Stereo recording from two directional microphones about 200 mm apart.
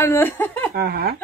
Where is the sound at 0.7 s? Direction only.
50° right (ahead or behind).